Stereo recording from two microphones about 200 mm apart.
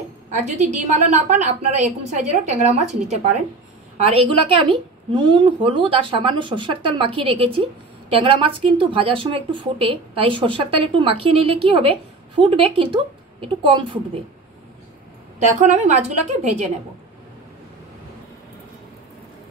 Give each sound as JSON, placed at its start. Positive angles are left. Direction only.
{"t": 0.5, "sound": "a woman's voice", "side_deg": -35}
{"t": 4.0, "sound": "speech", "side_deg": -25}
{"t": 15.3, "sound": "a woman's voice", "side_deg": -35}